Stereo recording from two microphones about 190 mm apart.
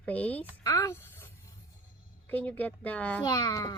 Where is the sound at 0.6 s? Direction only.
15° left (ahead or behind).